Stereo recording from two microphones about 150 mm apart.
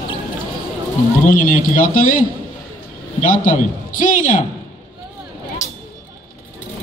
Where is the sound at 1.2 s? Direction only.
60° left (ahead or behind).